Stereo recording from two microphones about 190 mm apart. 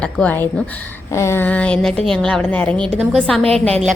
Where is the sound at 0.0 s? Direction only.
10° left (ahead or behind).